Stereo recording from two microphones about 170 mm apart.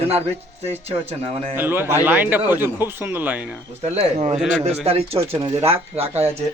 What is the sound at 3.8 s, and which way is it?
Speech, 40° right (ahead or behind).